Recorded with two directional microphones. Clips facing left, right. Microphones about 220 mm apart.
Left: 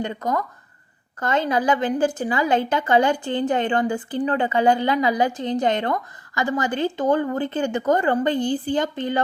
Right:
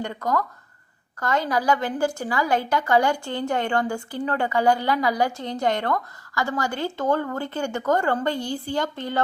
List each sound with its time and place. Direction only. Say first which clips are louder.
0.0 s a woman's voice: left 1 dB; 20° left (ahead or behind)